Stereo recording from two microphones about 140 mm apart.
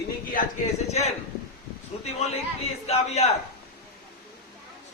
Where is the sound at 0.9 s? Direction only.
50° left (ahead or behind).